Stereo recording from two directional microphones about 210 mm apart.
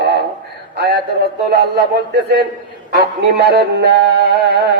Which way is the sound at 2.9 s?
50° right (ahead or behind).